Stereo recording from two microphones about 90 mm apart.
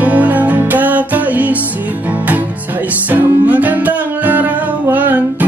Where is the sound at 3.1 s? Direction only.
15° right (ahead or behind).